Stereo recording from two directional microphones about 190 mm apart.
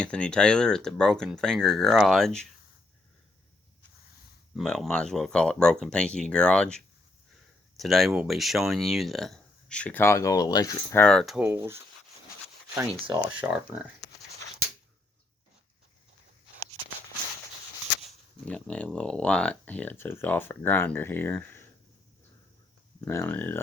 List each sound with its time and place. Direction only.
0.0 s speech: 5° left (ahead or behind)
4.5 s speech: centre (ahead or behind); by 11.0 s 20° left (ahead or behind)
11.0 s speech: 5° left (ahead or behind)
11.3 s speech: 10° right (ahead or behind)
13.4 s speech: 5° right (ahead or behind)
18.4 s speech: 5° left (ahead or behind)
23.0 s speech: 10° left (ahead or behind)